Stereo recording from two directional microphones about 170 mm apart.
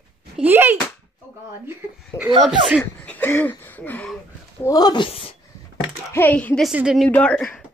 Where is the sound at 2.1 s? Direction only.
15° left (ahead or behind).